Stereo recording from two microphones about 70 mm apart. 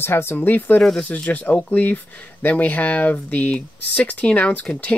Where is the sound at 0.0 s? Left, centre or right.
Left.